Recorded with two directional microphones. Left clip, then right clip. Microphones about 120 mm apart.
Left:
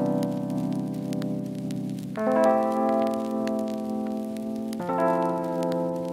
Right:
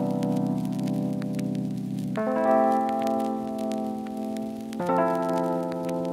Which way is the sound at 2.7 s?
20° left (ahead or behind).